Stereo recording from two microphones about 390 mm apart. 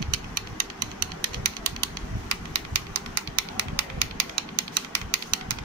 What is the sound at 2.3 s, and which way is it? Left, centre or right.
Typewriter, right.